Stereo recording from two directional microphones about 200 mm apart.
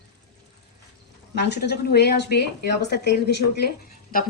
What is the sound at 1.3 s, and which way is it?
Speech, 55° left (ahead or behind).